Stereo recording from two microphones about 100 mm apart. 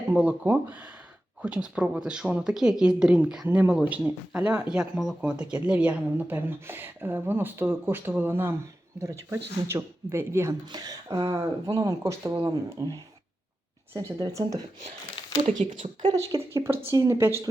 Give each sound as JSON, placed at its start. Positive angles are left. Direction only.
{"t": 0.1, "sound": "speech", "side_deg": -15}
{"t": 10.5, "sound": "speech", "side_deg": -40}
{"t": 15.4, "sound": "speech", "side_deg": -50}
{"t": 16.5, "sound": "speech", "side_deg": -25}